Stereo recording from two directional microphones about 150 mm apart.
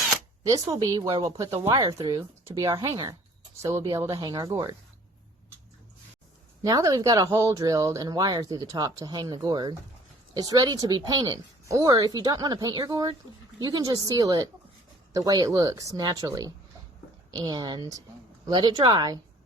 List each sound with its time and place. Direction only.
0.7 s speech: 25° right (ahead or behind)
1.5 s speech: 40° right (ahead or behind)
1.7 s speech: 25° right (ahead or behind)
6.6 s speech: 25° right (ahead or behind)